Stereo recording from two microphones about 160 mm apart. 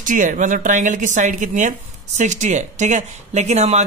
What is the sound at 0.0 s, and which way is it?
Speech, 55° right (ahead or behind).